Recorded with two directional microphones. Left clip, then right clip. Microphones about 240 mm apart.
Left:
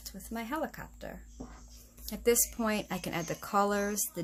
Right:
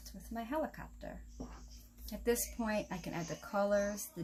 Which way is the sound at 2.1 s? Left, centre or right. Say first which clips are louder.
Left 7 dB; left.